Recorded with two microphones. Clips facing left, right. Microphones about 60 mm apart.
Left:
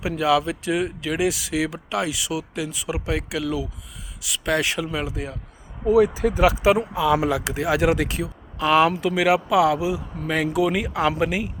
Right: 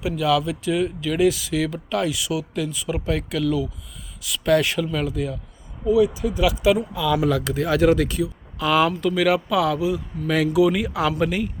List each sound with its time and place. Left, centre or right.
0.2 s speech: left
5.8 s speech: left; by 11.5 s centre